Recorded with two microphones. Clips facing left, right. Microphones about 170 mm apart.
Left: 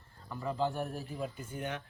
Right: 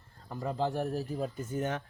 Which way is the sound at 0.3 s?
40° right (ahead or behind).